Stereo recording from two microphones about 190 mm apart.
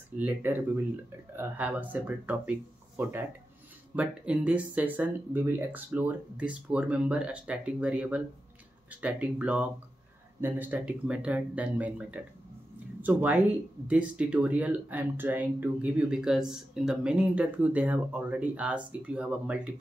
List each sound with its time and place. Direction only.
0.2 s speech: 10° right (ahead or behind)